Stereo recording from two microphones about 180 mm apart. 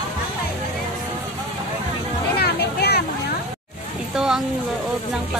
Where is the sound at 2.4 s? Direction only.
60° left (ahead or behind).